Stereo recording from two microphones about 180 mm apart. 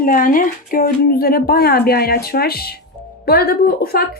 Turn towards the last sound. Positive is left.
turn(degrees=55)  # may be behind; listen again after turning